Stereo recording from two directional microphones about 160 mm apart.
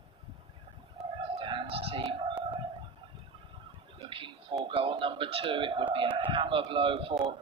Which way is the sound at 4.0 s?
35° right (ahead or behind).